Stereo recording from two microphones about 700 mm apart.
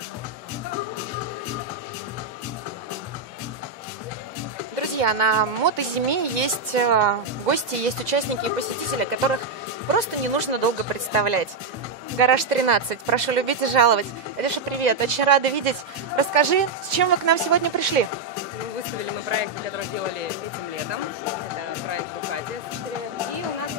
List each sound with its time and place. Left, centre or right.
4.7 s speech: right
12.2 s speech: right
16.3 s speech: right
19.2 s speech: right